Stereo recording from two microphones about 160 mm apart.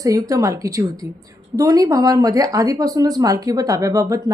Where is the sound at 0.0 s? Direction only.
20° right (ahead or behind).